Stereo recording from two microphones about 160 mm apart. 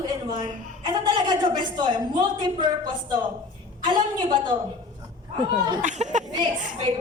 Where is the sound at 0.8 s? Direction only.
30° right (ahead or behind).